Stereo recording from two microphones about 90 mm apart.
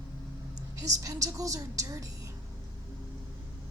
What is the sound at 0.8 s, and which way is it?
Speech, 40° right (ahead or behind).